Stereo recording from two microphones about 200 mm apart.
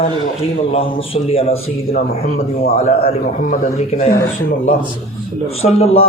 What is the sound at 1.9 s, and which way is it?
A man's voice, 40° left (ahead or behind).